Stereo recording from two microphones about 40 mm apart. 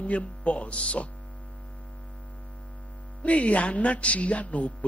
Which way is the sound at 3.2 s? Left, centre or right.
Left.